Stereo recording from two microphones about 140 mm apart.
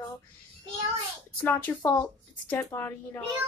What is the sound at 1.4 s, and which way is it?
A woman's voice, 15° left (ahead or behind).